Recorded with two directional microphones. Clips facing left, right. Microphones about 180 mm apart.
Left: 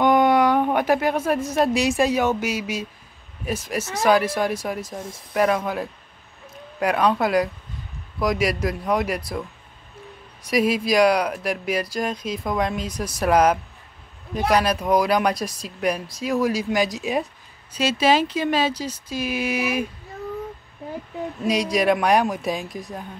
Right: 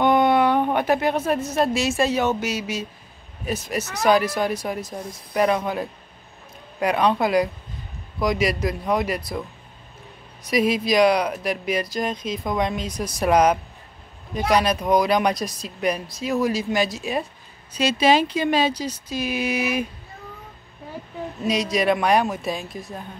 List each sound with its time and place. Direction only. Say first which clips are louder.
0.0 s speech: left 1 dB; 10° left (ahead or behind)
6.8 s speech: even; 5° left (ahead or behind)
8.2 s speech: even; 5° left (ahead or behind)
10.4 s speech: even; 10° left (ahead or behind)
17.7 s speech: right 1 dB; 5° left (ahead or behind)
21.5 s speech: left 1 dB; 10° left (ahead or behind)